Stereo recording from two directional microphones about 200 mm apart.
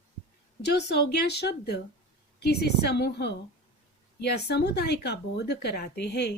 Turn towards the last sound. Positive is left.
turn(degrees=55)  # may be behind; listen again after turning